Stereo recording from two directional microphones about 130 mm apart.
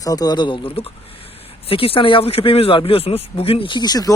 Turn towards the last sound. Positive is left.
turn(degrees=30)  # may be behind; listen again after turning